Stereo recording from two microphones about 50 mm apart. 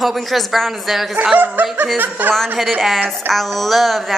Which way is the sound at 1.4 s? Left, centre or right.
Right.